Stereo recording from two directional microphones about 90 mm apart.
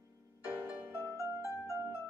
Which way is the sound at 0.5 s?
20° right (ahead or behind).